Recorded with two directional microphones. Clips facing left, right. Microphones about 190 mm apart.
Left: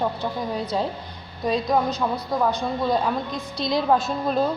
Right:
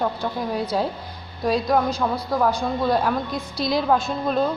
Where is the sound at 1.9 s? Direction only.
20° left (ahead or behind).